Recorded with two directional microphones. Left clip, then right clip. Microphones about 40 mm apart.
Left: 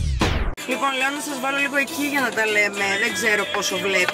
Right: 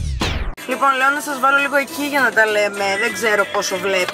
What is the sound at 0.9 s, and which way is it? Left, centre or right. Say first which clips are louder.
Speech: right 6 dB; left.